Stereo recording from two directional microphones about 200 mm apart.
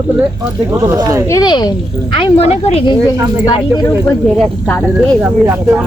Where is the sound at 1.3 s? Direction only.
20° left (ahead or behind).